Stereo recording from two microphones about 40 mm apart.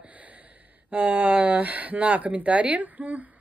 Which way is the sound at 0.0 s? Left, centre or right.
Right.